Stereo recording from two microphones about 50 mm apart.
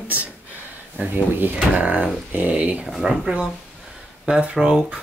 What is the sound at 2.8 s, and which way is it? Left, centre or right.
Speech, centre.